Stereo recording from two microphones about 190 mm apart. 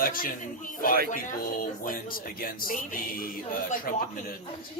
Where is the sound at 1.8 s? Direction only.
50° left (ahead or behind).